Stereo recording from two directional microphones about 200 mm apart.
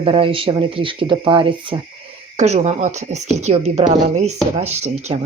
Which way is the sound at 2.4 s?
35° right (ahead or behind).